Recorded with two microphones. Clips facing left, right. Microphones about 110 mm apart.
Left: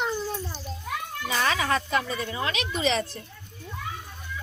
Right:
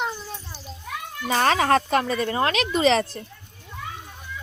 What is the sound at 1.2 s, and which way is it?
Speech, 45° right (ahead or behind).